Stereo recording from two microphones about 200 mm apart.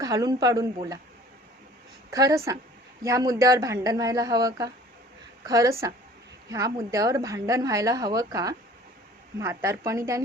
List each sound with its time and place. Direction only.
0.0 s a woman's voice: 20° right (ahead or behind)
2.0 s a woman's voice: 15° right (ahead or behind)
6.9 s a woman's voice: 15° right (ahead or behind)